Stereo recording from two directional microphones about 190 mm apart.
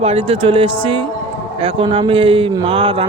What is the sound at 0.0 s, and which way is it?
Speech, 30° right (ahead or behind).